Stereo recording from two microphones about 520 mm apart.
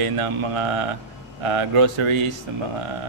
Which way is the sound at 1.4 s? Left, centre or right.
Right.